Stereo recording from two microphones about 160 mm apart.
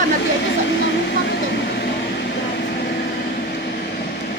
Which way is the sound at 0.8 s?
90° left.